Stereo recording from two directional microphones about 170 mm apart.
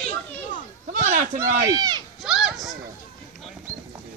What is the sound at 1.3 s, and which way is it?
Speech, 20° right (ahead or behind).